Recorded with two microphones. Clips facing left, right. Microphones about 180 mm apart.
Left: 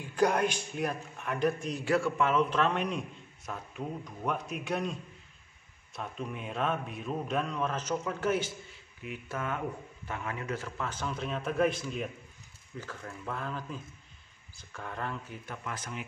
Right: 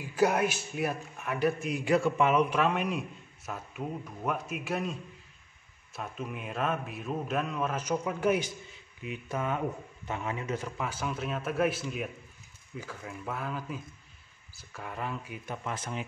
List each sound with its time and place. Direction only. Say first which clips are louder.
0.0 s a man's voice: right 1 dB; 5° right (ahead or behind)
5.9 s a man's voice: even; 5° right (ahead or behind); by 16.0 s 25° right (ahead or behind)